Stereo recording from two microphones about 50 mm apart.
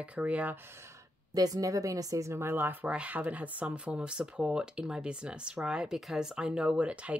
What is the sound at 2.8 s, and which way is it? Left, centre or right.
Speech, right.